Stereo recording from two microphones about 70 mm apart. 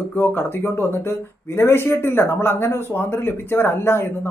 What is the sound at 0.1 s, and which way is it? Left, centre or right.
Speech, left.